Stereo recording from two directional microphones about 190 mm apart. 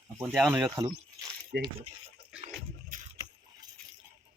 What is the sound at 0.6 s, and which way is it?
Speech, 20° right (ahead or behind).